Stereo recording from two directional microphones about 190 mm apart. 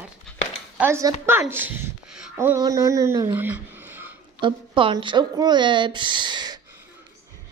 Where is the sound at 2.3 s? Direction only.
15° right (ahead or behind).